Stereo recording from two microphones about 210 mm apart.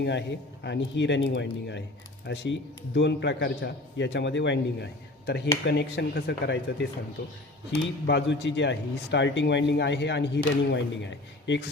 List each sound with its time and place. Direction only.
0.0 s speech: 55° left (ahead or behind)